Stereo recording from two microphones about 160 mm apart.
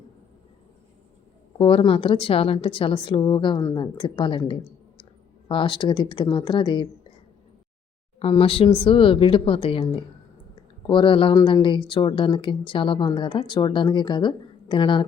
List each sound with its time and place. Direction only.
1.5 s a woman's voice: 35° left (ahead or behind)
8.2 s a woman's voice: 35° left (ahead or behind)
10.8 s a woman's voice: 30° left (ahead or behind)